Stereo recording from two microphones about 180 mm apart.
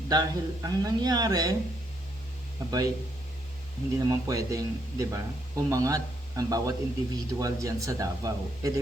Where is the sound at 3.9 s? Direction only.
20° right (ahead or behind).